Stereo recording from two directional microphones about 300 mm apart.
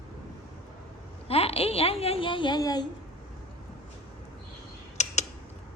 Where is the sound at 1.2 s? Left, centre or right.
Centre.